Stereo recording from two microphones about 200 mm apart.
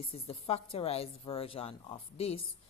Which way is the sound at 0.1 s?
30° left (ahead or behind).